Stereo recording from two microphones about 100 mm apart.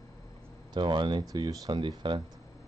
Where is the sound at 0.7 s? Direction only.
50° right (ahead or behind).